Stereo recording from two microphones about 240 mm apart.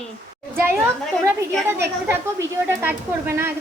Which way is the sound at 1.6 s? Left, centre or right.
Centre.